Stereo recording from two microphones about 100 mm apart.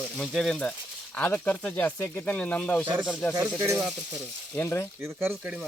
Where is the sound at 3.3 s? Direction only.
30° right (ahead or behind).